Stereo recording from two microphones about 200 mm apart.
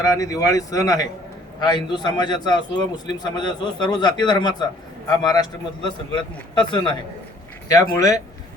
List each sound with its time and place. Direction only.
0.0 s a man's voice: 15° left (ahead or behind)
7.9 s speech: 15° left (ahead or behind)